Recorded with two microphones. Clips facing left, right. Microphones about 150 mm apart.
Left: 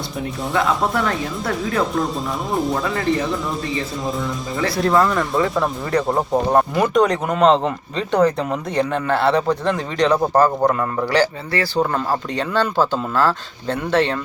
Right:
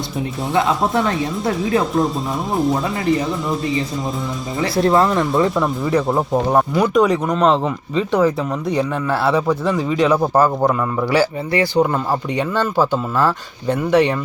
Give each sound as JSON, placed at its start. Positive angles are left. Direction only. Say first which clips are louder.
{"t": 0.9, "sound": "speech", "louder": "right 3 dB", "side_deg": -25}
{"t": 2.5, "sound": "speech", "louder": "right 3 dB", "side_deg": 0}
{"t": 4.6, "sound": "speech", "louder": "right 2 dB", "side_deg": -25}
{"t": 5.5, "sound": "speech", "louder": "right 2 dB", "side_deg": 0}